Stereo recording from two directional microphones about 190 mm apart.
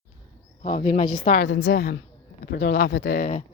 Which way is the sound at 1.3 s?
65° left (ahead or behind).